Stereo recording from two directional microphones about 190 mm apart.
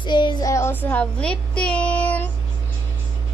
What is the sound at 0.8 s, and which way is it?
Speech, 5° left (ahead or behind).